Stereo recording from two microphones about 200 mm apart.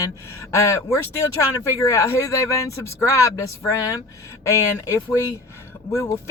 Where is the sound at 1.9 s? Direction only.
15° left (ahead or behind).